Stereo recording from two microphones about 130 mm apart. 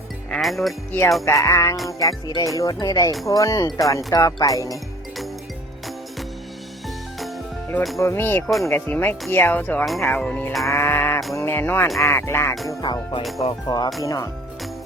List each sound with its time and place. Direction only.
0.3 s music: centre (ahead or behind)
1.2 s speech: 25° left (ahead or behind)
4.7 s music: centre (ahead or behind)
6.8 s music: centre (ahead or behind)
7.9 s speech: 20° left (ahead or behind)
10.7 s speech: 20° left (ahead or behind)
11.3 s music: 15° left (ahead or behind)
11.9 s speech: 20° left (ahead or behind)
12.8 s music: 35° left (ahead or behind)
14.0 s speech: 25° left (ahead or behind)